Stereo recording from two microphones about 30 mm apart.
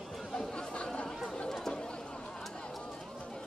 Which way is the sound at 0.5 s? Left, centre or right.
Left.